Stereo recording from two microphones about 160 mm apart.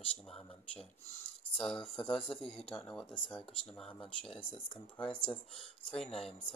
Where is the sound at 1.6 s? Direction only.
Centre (ahead or behind).